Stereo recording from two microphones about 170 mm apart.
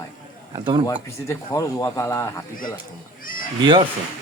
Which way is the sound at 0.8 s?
20° left (ahead or behind).